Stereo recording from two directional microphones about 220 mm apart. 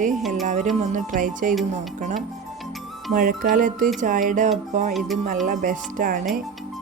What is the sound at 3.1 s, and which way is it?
Speech, 40° right (ahead or behind).